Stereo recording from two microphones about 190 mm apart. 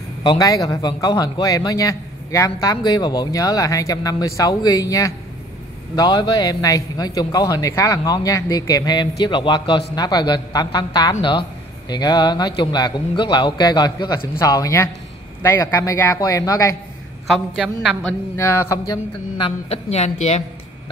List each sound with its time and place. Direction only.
0.2 s a man's voice: 20° left (ahead or behind)
17.3 s a woman's voice: 5° right (ahead or behind)
18.3 s a man's voice: 15° left (ahead or behind); by 20.4 s 35° left (ahead or behind)